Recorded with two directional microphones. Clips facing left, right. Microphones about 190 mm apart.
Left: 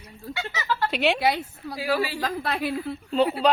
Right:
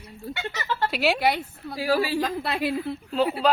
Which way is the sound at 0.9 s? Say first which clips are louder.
Even; 5° right (ahead or behind).